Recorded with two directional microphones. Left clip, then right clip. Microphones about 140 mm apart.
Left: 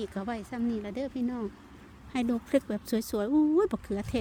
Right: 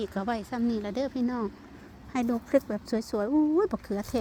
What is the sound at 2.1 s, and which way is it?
Speech, 30° left (ahead or behind).